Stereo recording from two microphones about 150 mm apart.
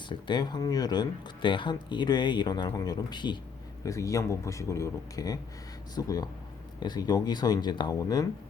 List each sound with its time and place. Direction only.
0.1 s speech: 30° left (ahead or behind)